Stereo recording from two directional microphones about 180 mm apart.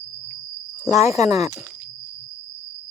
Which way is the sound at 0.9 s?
15° right (ahead or behind).